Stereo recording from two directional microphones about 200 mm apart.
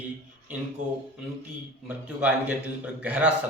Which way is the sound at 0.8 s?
40° right (ahead or behind).